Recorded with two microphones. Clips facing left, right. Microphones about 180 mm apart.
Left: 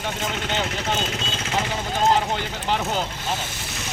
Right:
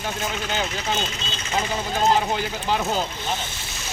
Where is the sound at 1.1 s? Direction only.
55° left (ahead or behind).